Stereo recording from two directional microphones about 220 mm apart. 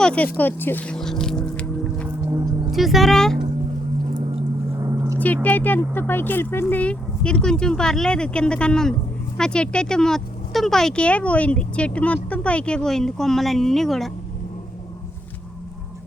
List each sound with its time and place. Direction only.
0.0 s speech: 5° left (ahead or behind)
0.3 s music: 10° left (ahead or behind)
2.0 s music: 15° right (ahead or behind)
2.7 s speech: centre (ahead or behind)
4.8 s a sound: 15° right (ahead or behind)
5.2 s speech: 5° left (ahead or behind)